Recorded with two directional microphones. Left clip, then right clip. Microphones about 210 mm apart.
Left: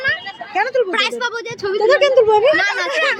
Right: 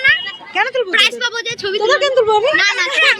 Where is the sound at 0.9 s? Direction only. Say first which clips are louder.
Right 4 dB; 50° left (ahead or behind).